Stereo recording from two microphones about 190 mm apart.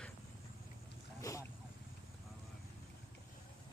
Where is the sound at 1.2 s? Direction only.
15° left (ahead or behind).